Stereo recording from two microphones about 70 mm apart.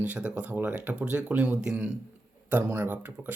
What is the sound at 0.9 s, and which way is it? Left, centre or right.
Speech, centre.